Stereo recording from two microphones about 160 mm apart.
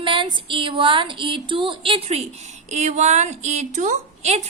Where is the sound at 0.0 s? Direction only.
30° right (ahead or behind).